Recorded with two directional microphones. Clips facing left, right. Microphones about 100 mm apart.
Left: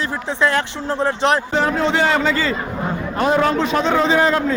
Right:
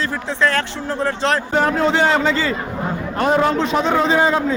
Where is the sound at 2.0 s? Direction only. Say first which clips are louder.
Right 1 dB; 30° right (ahead or behind).